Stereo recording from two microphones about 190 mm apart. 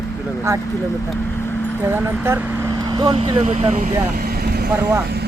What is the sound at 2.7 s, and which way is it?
Speech, 20° right (ahead or behind).